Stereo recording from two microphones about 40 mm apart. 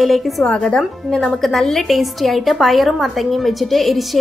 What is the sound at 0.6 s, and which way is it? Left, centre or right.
A woman's voice, centre.